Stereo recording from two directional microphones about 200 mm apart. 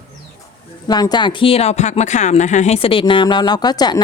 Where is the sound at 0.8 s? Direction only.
20° left (ahead or behind).